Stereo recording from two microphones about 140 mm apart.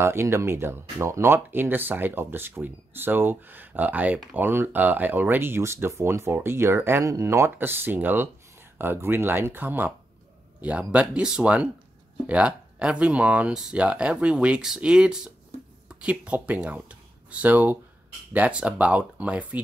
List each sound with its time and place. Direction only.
0.0 s speech: 20° right (ahead or behind)